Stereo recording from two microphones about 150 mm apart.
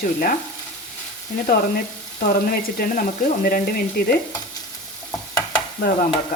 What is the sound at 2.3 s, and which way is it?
Frying, 75° left (ahead or behind).